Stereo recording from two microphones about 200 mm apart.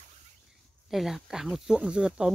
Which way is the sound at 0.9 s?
Centre (ahead or behind).